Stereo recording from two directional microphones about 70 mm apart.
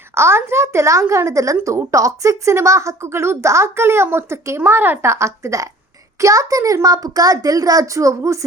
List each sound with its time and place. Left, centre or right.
0.1 s a woman's voice: right
5.1 s a woman's voice: right